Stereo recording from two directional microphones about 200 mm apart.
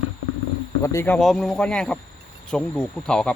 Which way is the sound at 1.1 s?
Centre (ahead or behind).